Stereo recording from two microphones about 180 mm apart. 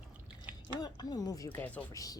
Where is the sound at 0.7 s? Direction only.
20° left (ahead or behind).